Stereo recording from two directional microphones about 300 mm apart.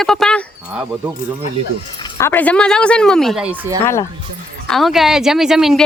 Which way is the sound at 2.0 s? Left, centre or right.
Centre.